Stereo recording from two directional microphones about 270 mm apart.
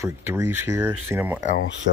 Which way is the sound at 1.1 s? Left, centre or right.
Centre.